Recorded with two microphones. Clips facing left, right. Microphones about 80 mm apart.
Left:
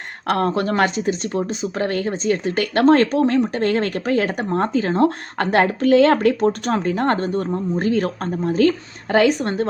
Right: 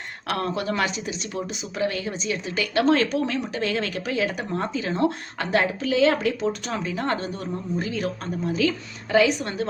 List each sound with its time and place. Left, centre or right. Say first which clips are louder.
0.3 s speech: left 7 dB; left